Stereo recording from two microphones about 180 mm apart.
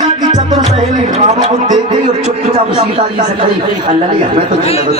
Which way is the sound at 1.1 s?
40° right (ahead or behind).